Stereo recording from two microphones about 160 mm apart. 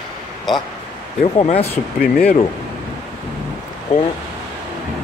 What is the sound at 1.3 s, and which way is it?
Speech, 35° left (ahead or behind).